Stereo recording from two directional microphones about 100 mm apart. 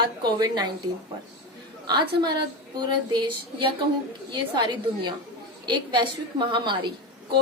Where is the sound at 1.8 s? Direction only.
45° right (ahead or behind).